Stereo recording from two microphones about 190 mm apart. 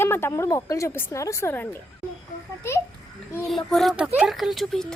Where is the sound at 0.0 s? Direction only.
10° left (ahead or behind).